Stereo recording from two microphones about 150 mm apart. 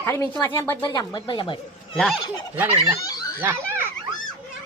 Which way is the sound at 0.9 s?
25° left (ahead or behind).